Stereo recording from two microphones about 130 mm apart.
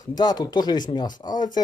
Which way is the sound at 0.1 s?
30° left (ahead or behind).